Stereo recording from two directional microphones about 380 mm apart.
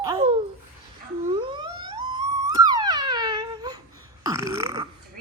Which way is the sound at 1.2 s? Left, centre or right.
Centre.